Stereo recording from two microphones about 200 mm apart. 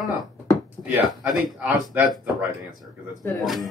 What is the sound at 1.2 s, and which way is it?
Speech, centre (ahead or behind).